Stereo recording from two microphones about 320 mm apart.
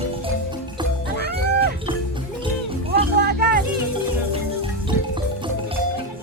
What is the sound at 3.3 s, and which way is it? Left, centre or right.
Music, right.